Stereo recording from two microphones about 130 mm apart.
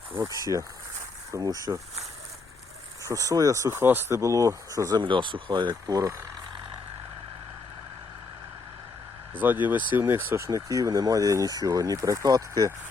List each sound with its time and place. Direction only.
0.2 s speech: 25° right (ahead or behind)
3.0 s speech: 25° right (ahead or behind)
9.3 s speech: 15° right (ahead or behind); by 12.7 s 30° right (ahead or behind)